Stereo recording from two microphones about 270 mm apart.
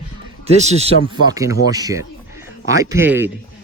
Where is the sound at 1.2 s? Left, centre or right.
Centre.